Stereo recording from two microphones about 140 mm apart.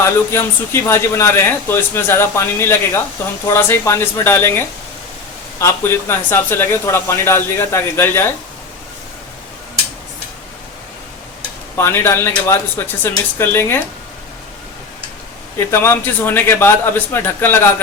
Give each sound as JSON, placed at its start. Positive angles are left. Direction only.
{"t": 0.0, "sound": "speech", "side_deg": 20}
{"t": 11.8, "sound": "speech", "side_deg": 20}
{"t": 15.5, "sound": "speech", "side_deg": 20}